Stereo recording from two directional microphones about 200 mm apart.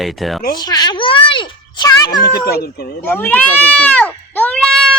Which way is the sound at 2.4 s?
50° left (ahead or behind).